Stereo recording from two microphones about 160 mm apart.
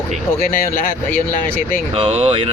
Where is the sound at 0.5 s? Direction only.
60° left (ahead or behind).